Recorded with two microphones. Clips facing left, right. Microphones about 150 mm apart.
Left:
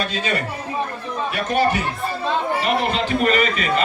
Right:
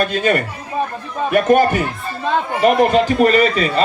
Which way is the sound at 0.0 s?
55° right (ahead or behind).